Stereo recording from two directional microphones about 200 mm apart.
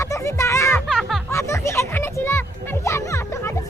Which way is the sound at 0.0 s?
15° left (ahead or behind).